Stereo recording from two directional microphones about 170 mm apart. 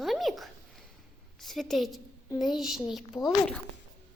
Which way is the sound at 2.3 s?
25° left (ahead or behind).